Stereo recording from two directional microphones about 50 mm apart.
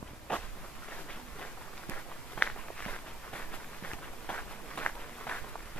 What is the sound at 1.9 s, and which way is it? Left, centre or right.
Walk, left.